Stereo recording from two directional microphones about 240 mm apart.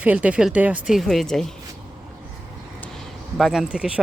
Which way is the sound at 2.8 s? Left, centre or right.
Centre.